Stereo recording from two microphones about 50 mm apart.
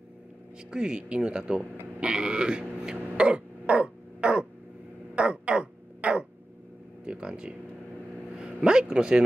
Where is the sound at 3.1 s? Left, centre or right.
Centre.